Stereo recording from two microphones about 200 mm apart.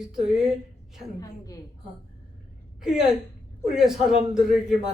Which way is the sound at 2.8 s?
5° right (ahead or behind).